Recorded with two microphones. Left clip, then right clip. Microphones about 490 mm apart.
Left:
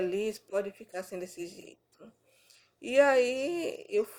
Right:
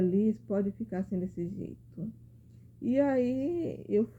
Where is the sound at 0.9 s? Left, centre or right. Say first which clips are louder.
Even; centre.